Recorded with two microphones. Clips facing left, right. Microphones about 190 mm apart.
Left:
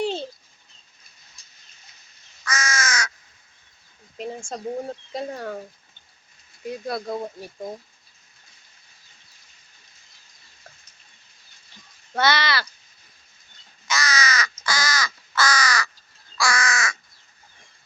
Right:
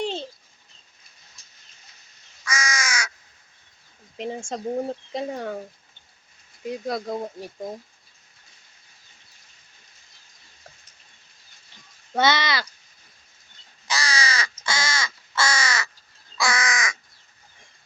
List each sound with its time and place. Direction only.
0.0 s dog: 5° left (ahead or behind)
2.4 s crow: 10° right (ahead or behind)
4.2 s speech: 25° right (ahead or behind)
6.7 s speech: 15° right (ahead or behind)
12.1 s speech: 20° right (ahead or behind)
13.8 s crow: 30° right (ahead or behind)